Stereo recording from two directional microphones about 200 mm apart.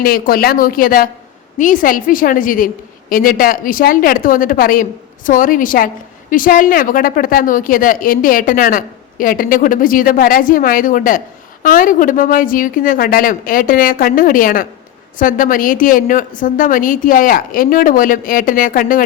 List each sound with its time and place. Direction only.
0.0 s a woman's voice: 45° left (ahead or behind)